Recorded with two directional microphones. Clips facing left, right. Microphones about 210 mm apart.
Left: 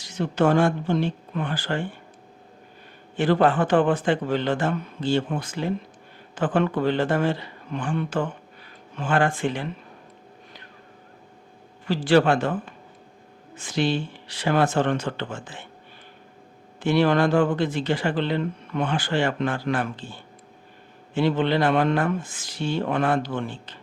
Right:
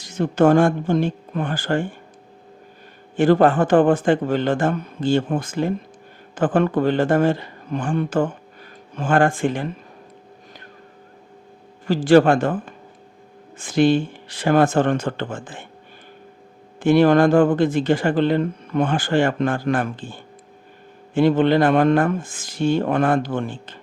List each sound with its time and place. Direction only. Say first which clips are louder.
0.0 s speech: right 5 dB; 50° right (ahead or behind)
3.2 s speech: right 5 dB; 45° right (ahead or behind)
11.9 s speech: right 5 dB; 45° right (ahead or behind)
16.8 s speech: right 6 dB; 50° right (ahead or behind)